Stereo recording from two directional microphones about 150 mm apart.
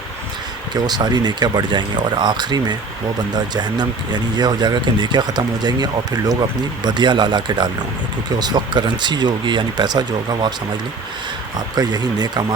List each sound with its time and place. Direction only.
0.7 s speech: 25° right (ahead or behind)
11.7 s speech: 25° right (ahead or behind)